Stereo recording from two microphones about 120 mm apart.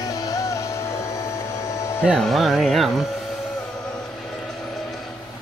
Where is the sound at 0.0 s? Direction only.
25° left (ahead or behind).